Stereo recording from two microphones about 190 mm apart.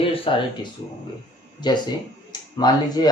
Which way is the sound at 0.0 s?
30° left (ahead or behind).